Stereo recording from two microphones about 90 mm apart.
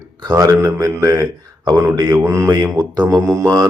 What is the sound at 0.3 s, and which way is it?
A man's voice, 40° right (ahead or behind).